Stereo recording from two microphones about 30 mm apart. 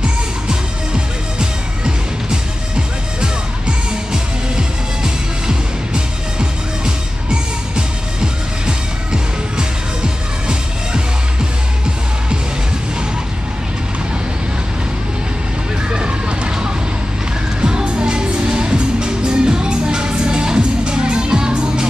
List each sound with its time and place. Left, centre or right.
0.5 s music: right
4.1 s music: right
17.6 s music: right